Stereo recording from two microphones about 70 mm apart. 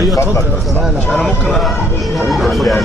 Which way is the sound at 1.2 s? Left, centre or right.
Centre.